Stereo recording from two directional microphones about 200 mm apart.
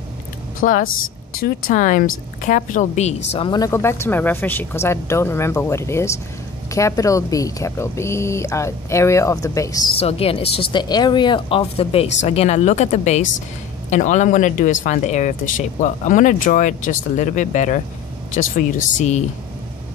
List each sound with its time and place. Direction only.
0.8 s speech: 90° left
1.4 s speech: 40° left (ahead or behind)
3.3 s speech: 20° left (ahead or behind)
9.9 s speech: 30° left (ahead or behind)